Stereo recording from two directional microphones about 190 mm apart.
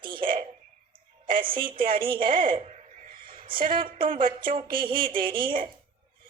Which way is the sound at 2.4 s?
40° right (ahead or behind).